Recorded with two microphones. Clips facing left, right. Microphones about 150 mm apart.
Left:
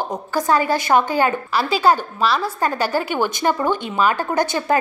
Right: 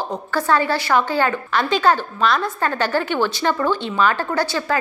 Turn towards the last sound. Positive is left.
turn(degrees=20)  # may be behind; listen again after turning